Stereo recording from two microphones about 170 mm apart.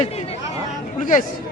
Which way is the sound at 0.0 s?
40° left (ahead or behind).